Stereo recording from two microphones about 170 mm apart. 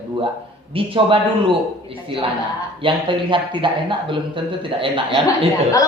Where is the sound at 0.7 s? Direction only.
30° right (ahead or behind).